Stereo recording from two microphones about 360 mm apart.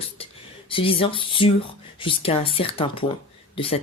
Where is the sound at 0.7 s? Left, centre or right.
Centre.